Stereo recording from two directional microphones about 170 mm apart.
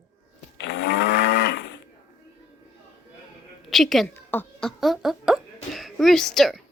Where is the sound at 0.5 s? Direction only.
90° left.